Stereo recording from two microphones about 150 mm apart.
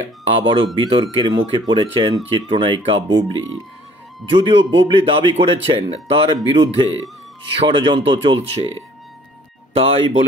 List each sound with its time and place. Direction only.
0.3 s speech: 35° right (ahead or behind)
9.8 s speech: 40° right (ahead or behind)